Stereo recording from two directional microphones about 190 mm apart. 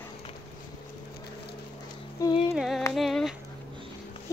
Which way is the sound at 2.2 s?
15° left (ahead or behind).